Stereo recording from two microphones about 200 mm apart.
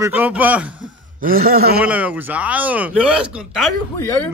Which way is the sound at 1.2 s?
45° right (ahead or behind).